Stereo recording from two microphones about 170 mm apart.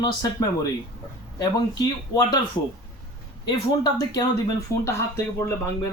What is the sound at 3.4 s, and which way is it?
Speech, 25° left (ahead or behind).